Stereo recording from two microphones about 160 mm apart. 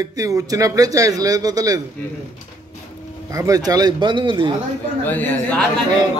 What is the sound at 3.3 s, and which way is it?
Speech, 20° right (ahead or behind).